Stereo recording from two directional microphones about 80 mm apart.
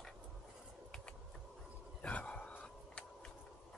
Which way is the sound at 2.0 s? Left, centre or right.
Centre.